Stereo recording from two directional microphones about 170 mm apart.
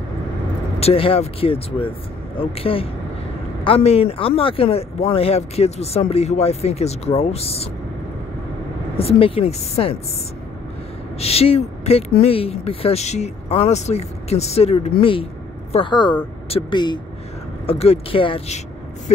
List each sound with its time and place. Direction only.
0.7 s speech: 35° left (ahead or behind)
8.9 s speech: 35° left (ahead or behind)
11.1 s speech: 35° left (ahead or behind)